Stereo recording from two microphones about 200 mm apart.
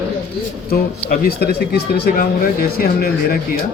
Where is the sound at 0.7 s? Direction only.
50° left (ahead or behind).